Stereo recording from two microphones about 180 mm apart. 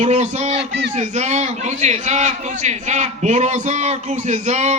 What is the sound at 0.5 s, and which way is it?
Speech, 70° right (ahead or behind).